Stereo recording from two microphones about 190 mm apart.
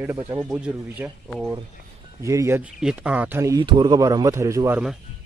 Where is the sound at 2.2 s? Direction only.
15° right (ahead or behind).